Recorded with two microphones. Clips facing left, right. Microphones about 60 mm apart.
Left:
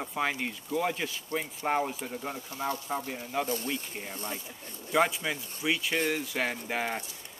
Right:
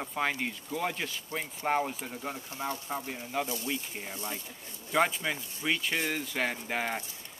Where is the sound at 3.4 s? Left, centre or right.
Left.